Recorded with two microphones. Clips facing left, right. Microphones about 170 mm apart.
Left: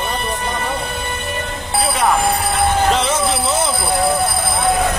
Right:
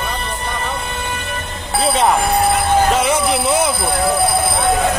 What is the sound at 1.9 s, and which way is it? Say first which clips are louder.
Speech: right 3 dB; 20° right (ahead or behind).